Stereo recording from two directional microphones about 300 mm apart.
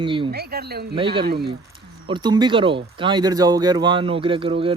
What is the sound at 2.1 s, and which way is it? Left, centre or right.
Speech, centre.